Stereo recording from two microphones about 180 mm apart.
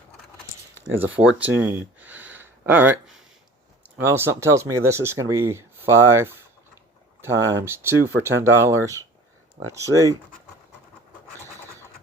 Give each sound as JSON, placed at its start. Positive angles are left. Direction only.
{"t": 0.9, "sound": "speech", "side_deg": -10}